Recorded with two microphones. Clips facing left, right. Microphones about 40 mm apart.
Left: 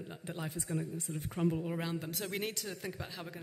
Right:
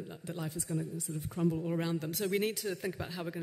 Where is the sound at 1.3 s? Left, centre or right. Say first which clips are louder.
Right 1 dB; left.